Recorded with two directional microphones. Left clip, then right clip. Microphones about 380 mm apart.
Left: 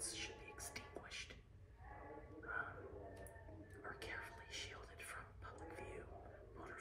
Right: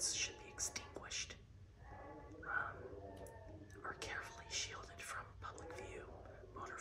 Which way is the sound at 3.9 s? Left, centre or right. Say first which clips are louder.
Right 3 dB; centre.